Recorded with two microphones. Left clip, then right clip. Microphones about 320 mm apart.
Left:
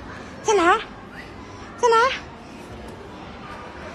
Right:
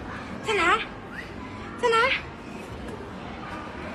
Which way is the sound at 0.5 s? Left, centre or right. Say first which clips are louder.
Left 5 dB; centre.